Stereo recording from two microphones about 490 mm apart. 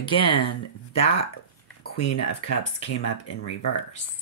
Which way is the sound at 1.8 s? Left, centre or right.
Left.